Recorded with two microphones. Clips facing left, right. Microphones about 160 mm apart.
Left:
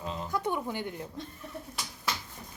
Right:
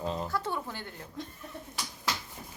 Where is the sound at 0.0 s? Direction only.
40° right (ahead or behind).